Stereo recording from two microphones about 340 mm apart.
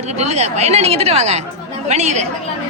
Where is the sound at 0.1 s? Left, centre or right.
Centre.